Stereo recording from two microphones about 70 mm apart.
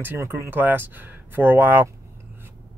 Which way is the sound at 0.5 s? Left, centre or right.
Right.